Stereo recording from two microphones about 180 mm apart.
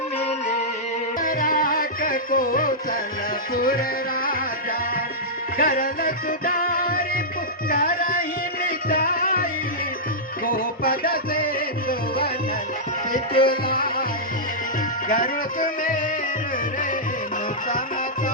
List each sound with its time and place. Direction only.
1.2 s music: 55° left (ahead or behind)
5.5 s music: 55° left (ahead or behind)
15.1 s music: 50° left (ahead or behind)